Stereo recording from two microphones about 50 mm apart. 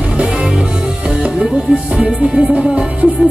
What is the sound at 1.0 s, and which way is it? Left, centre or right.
Music, right.